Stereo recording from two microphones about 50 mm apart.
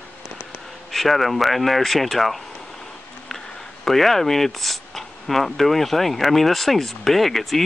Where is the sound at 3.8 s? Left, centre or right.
Centre.